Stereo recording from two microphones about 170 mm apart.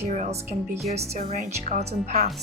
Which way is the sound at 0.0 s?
40° right (ahead or behind).